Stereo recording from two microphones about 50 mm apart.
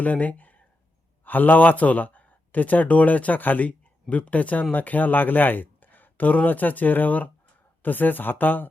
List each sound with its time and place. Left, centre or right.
0.0 s speech: left